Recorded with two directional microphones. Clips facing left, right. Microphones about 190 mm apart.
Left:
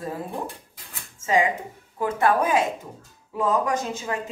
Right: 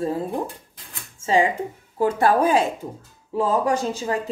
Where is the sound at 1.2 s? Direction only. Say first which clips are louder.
Right 2 dB; 30° right (ahead or behind).